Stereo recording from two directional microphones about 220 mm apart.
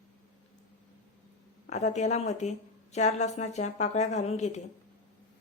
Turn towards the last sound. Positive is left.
turn(degrees=30)  # may be behind; listen again after turning